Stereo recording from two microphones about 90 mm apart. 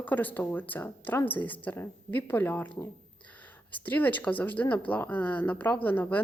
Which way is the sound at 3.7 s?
20° left (ahead or behind).